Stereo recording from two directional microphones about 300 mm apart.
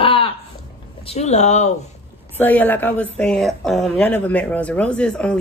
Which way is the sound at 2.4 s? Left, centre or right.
Centre.